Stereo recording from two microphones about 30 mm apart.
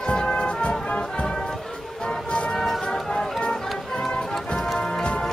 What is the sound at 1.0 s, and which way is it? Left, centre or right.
Music, left.